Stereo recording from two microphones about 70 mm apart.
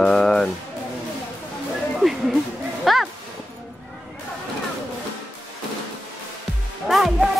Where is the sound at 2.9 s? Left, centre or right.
Centre.